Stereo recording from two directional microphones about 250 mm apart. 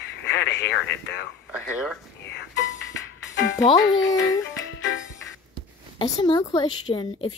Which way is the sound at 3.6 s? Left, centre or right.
Centre.